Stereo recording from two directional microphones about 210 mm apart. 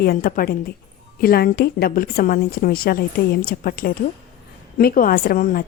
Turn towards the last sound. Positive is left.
turn(degrees=45)  # may be behind; listen again after turning